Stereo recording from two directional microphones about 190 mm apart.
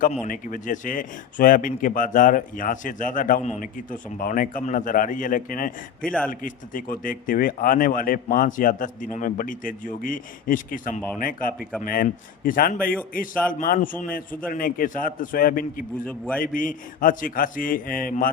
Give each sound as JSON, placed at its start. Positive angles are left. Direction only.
{"t": 0.0, "sound": "speech", "side_deg": 45}
{"t": 6.0, "sound": "speech", "side_deg": 5}
{"t": 6.4, "sound": "speech", "side_deg": 45}
{"t": 16.0, "sound": "a man's voice", "side_deg": 5}
{"t": 16.4, "sound": "speech", "side_deg": 45}